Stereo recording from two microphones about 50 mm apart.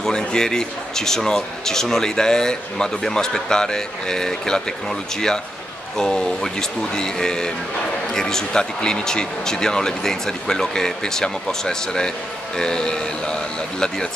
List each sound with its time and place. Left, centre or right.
0.0 s a man's voice: centre
5.9 s a man's voice: centre